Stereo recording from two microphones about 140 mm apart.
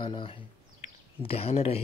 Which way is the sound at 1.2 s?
45° left (ahead or behind).